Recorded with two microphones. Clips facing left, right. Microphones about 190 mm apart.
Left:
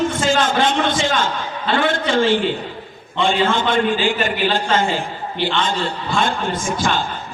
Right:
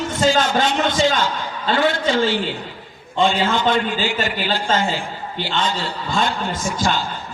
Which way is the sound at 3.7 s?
50° left (ahead or behind).